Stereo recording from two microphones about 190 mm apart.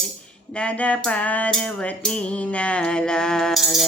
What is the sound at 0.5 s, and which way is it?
Music, 5° left (ahead or behind).